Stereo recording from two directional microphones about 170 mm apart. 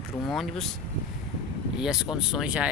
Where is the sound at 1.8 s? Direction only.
5° right (ahead or behind).